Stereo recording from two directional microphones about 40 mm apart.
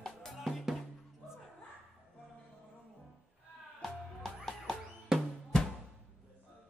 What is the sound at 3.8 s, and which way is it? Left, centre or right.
Music, centre.